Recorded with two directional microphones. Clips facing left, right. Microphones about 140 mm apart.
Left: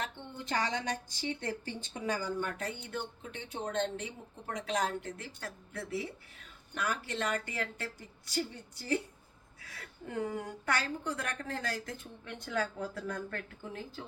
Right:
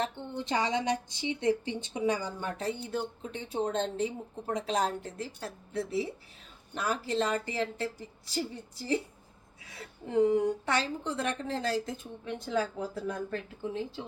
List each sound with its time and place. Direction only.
0.0 s a woman's voice: 20° right (ahead or behind)
9.7 s a woman's voice: 20° right (ahead or behind)
12.8 s a woman's voice: 15° right (ahead or behind)